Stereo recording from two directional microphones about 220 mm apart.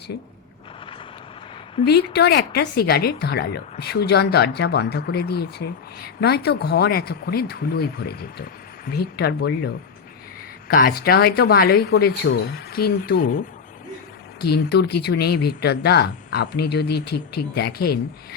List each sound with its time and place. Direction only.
1.8 s speech: 50° left (ahead or behind)
10.7 s speech: 40° left (ahead or behind)
14.4 s speech: 50° left (ahead or behind)